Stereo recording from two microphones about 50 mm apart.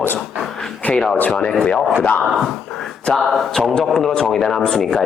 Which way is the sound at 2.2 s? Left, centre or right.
Centre.